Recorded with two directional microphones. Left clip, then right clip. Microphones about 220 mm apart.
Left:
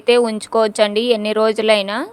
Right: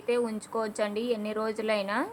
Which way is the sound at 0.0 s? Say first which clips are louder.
Left 14 dB; 40° left (ahead or behind).